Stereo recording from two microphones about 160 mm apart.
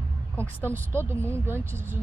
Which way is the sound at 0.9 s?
15° right (ahead or behind).